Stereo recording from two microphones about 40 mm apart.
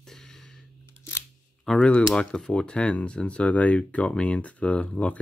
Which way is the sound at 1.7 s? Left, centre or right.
Centre.